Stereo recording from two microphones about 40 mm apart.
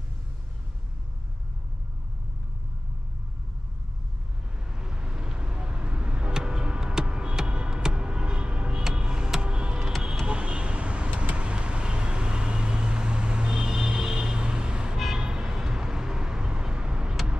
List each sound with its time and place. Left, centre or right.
4.7 s vehicle: centre
8.9 s a sound: right
10.2 s vehicle: right